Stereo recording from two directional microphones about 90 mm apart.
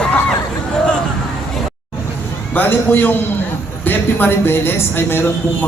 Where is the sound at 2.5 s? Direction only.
20° left (ahead or behind).